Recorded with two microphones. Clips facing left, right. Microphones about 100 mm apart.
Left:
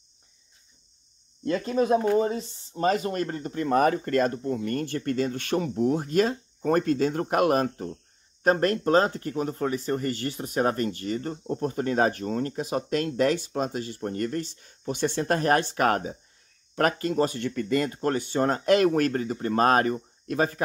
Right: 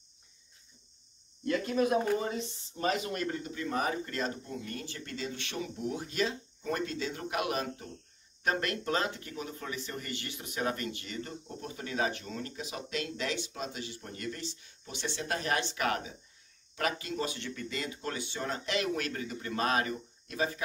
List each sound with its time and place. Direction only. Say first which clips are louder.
1.4 s speech: left 4 dB; 35° left (ahead or behind); by 20.6 s 50° left (ahead or behind)